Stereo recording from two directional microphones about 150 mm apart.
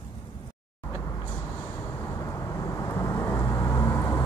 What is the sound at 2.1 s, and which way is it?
Vehicle, 20° left (ahead or behind).